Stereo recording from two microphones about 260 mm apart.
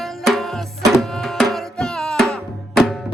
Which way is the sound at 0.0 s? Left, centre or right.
Centre.